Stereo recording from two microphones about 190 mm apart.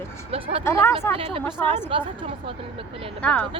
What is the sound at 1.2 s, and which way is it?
Speech, 30° right (ahead or behind).